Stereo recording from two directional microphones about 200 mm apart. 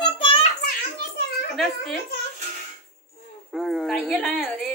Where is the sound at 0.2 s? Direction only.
25° left (ahead or behind).